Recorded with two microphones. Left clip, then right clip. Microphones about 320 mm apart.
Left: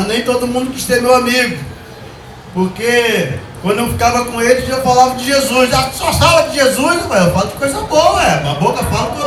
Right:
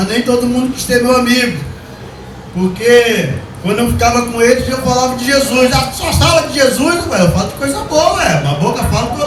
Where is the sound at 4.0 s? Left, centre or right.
Centre.